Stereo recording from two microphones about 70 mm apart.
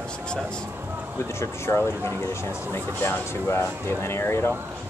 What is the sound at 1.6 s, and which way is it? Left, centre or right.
Speech, left.